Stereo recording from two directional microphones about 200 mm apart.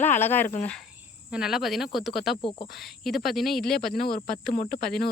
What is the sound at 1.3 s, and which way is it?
Speech, centre (ahead or behind).